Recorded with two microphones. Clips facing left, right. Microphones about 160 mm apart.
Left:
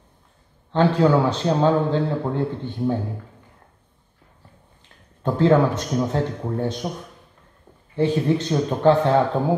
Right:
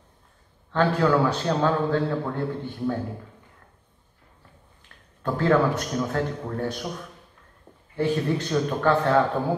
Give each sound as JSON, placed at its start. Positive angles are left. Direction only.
{"t": 0.7, "sound": "a man's voice", "side_deg": 20}
{"t": 5.2, "sound": "a man's voice", "side_deg": 20}
{"t": 7.9, "sound": "a man's voice", "side_deg": 20}